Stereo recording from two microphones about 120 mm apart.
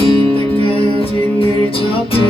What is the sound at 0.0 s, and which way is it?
Music, 50° left (ahead or behind).